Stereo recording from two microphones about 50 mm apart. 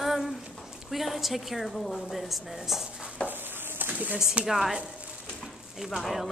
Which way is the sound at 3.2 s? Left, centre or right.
Right.